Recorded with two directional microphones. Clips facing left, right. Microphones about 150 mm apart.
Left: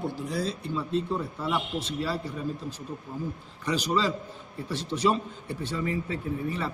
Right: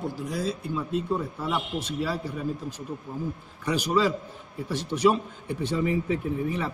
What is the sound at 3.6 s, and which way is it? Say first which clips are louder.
A man's voice: right 3 dB; 10° right (ahead or behind).